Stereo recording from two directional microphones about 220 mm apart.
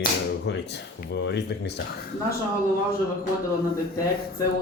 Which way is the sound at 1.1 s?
50° left (ahead or behind).